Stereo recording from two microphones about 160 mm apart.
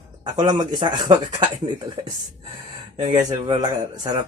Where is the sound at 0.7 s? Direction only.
25° right (ahead or behind).